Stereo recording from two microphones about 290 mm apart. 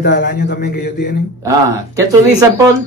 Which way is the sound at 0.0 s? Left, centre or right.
Left.